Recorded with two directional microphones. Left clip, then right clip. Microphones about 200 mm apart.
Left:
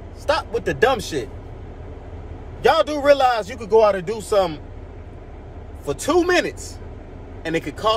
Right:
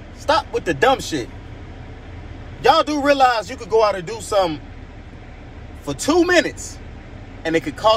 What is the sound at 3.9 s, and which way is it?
Speech, 10° left (ahead or behind).